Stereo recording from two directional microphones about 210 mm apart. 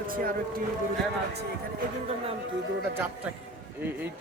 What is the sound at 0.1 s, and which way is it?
Speech, 40° right (ahead or behind).